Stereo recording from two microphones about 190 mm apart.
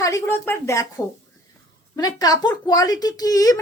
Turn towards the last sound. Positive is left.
turn(degrees=20)  # may be behind; listen again after turning